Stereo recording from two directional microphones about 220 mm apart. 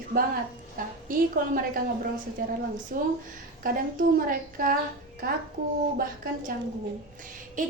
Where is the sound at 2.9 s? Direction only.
40° right (ahead or behind).